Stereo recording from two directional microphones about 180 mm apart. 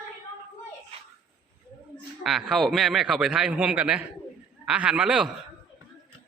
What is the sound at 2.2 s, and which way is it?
A man's voice, centre (ahead or behind).